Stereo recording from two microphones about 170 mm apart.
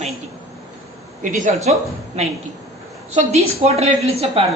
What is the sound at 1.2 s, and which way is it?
Speech, 50° right (ahead or behind).